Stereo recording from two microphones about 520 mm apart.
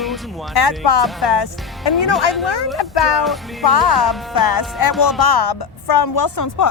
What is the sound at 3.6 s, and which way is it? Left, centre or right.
Speech, left.